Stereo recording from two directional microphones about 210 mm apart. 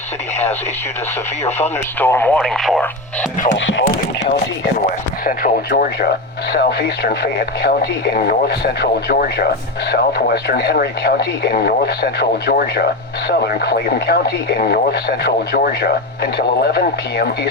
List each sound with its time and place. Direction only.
1.5 s speech: 30° left (ahead or behind)
2.0 s speech: 10° left (ahead or behind)
3.5 s speech: 60° left (ahead or behind)
5.2 s speech: 45° left (ahead or behind)